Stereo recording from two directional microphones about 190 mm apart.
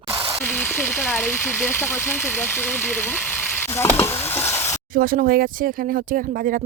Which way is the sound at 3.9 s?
10° left (ahead or behind).